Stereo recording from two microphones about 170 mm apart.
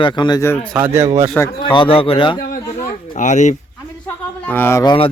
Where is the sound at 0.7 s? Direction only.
10° right (ahead or behind).